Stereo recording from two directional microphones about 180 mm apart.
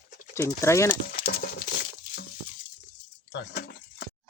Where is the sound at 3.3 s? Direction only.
65° left (ahead or behind).